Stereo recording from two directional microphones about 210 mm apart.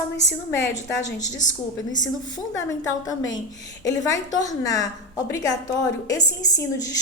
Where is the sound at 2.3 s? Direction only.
15° left (ahead or behind).